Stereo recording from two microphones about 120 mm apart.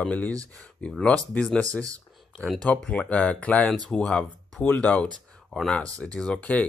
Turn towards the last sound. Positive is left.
turn(degrees=10)  # may be behind; listen again after turning